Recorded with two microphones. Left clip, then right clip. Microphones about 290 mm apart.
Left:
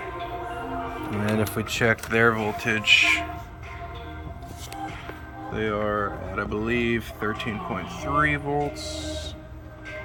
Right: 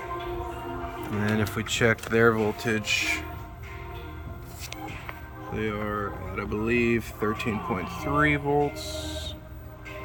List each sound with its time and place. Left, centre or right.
1.4 s speech: centre
5.5 s speech: centre